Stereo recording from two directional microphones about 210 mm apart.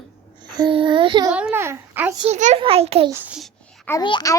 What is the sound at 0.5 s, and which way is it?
Speech, 20° right (ahead or behind).